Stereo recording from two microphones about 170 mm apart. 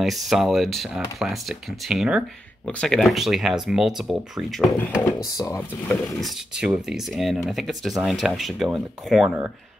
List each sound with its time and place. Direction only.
0.0 s speech: centre (ahead or behind)
5.0 s speech: 20° left (ahead or behind)
6.2 s speech: 5° right (ahead or behind)